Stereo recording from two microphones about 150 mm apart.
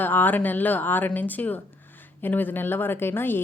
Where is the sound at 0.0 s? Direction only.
10° left (ahead or behind).